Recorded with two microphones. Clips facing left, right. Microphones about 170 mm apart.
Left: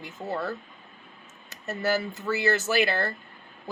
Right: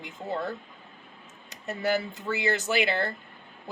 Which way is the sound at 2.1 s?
15° right (ahead or behind).